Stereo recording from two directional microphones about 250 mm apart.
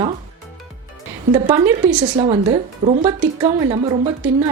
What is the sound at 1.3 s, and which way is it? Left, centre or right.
A woman's voice, centre.